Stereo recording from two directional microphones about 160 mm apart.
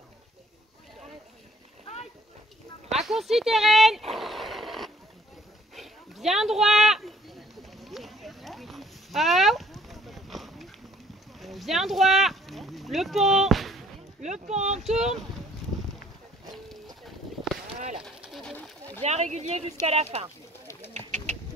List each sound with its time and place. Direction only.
2.9 s speech: centre (ahead or behind)
4.1 s wild animals: centre (ahead or behind)
5.8 s a sound: centre (ahead or behind)
14.2 s speech: 45° right (ahead or behind)
14.8 s speech: centre (ahead or behind)
17.7 s a sound: 50° right (ahead or behind)
18.2 s pigeon: 5° right (ahead or behind)
19.0 s speech: 45° right (ahead or behind)
20.9 s bird: 45° right (ahead or behind)